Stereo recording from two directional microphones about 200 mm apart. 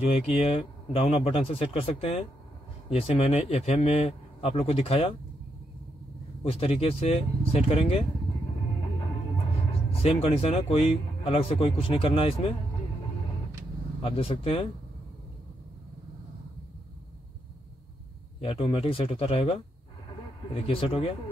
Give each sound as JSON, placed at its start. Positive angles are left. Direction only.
{"t": 0.0, "sound": "speech", "side_deg": 30}
{"t": 6.4, "sound": "speech", "side_deg": 30}
{"t": 10.0, "sound": "speech", "side_deg": 30}
{"t": 14.0, "sound": "speech", "side_deg": 30}
{"t": 18.4, "sound": "speech", "side_deg": 30}